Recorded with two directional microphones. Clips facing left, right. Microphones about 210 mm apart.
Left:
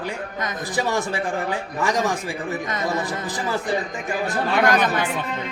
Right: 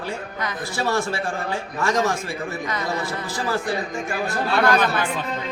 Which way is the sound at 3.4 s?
20° left (ahead or behind).